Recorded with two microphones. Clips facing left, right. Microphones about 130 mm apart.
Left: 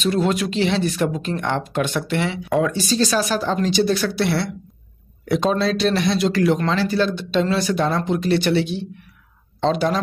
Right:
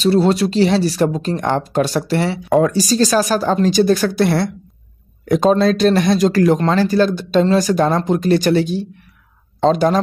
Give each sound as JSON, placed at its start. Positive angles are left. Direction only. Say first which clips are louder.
{"t": 0.0, "sound": "speech", "louder": "right 6 dB", "side_deg": -35}